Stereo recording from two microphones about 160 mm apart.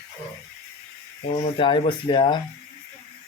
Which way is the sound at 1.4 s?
35° left (ahead or behind).